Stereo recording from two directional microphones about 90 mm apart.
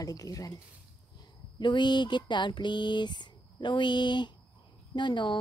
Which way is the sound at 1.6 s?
60° left (ahead or behind).